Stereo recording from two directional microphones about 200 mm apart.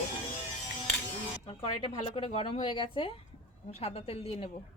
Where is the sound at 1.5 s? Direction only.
25° left (ahead or behind).